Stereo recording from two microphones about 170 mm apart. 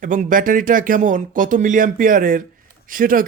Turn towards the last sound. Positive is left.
turn(degrees=-55)  # may be behind; listen again after turning